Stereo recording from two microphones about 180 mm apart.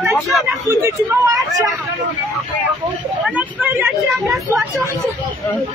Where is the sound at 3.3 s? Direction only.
10° right (ahead or behind).